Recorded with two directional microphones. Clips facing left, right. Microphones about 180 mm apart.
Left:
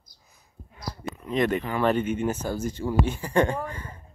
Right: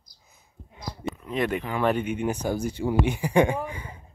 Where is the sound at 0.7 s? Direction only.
20° right (ahead or behind).